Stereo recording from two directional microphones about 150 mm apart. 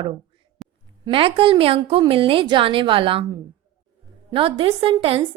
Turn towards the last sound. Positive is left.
turn(degrees=-40)  # may be behind; listen again after turning